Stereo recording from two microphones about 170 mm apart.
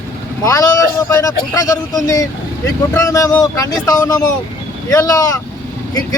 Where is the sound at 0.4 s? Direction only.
20° left (ahead or behind).